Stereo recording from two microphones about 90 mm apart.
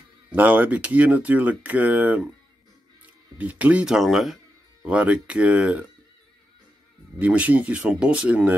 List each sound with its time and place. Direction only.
0.3 s speech: 15° right (ahead or behind)
3.3 s speech: 15° right (ahead or behind)
4.8 s speech: 15° right (ahead or behind)
7.2 s speech: 15° right (ahead or behind)